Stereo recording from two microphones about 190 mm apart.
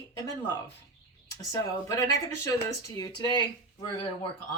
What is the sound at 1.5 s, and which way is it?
Speech, 20° left (ahead or behind).